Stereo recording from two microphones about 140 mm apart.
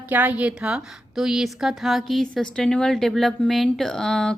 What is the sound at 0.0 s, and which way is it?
A woman's voice, 10° right (ahead or behind).